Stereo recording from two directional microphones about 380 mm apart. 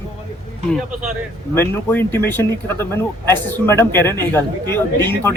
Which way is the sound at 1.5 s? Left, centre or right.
Centre.